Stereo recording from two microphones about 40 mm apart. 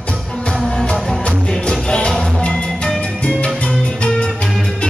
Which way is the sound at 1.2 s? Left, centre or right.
Left.